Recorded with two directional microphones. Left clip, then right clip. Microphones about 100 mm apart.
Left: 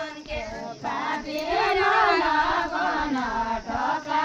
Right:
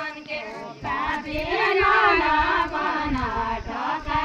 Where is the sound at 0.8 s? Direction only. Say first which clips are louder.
Right 2 dB; 15° left (ahead or behind).